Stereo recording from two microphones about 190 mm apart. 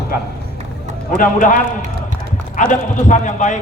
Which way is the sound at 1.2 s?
45° left (ahead or behind).